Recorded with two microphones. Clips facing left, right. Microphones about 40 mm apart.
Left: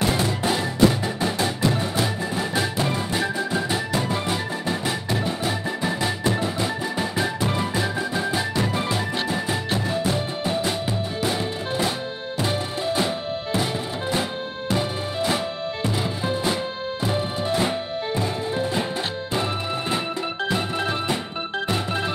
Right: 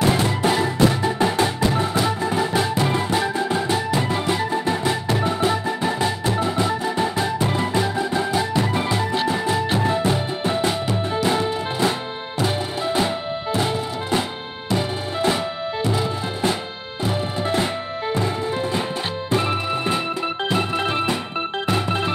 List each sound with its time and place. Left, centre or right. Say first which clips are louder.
0.0 s music: right 3 dB; right
0.6 s music: right 1 dB; centre
2.3 s music: right 3 dB; centre
3.7 s music: right 3 dB; centre
9.8 s music: right 4 dB; right
15.9 s music: right 1 dB; centre
20.4 s organ: right 3 dB; right